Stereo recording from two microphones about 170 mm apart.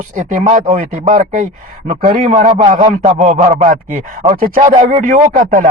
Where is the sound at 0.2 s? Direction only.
50° right (ahead or behind).